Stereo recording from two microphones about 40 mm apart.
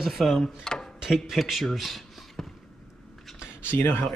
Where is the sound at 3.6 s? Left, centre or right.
Left.